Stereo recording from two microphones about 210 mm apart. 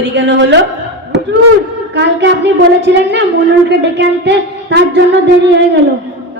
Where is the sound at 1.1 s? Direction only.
55° right (ahead or behind).